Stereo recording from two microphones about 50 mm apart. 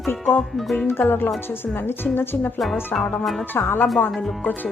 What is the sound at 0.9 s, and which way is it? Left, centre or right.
Speech, left.